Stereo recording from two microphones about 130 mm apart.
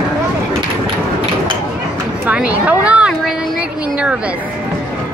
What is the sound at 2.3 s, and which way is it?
Speech, 10° right (ahead or behind).